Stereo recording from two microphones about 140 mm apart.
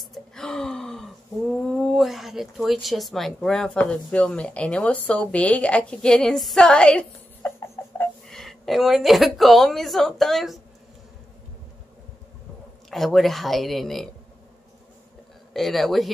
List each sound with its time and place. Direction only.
0.0 s gasp: centre (ahead or behind)
7.4 s a sound: 15° left (ahead or behind)
8.3 s a woman's voice: centre (ahead or behind)
12.9 s a woman's voice: centre (ahead or behind)
15.5 s a woman's voice: centre (ahead or behind)